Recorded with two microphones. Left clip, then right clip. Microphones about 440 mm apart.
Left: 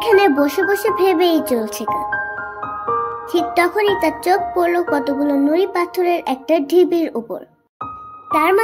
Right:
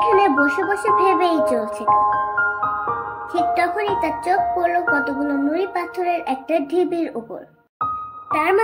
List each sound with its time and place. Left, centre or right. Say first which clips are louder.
0.0 s a child's voice: left 2 dB; centre
3.3 s music: left 2 dB; left
8.3 s speech: left 4 dB; centre